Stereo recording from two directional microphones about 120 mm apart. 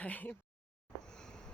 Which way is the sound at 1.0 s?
5° left (ahead or behind).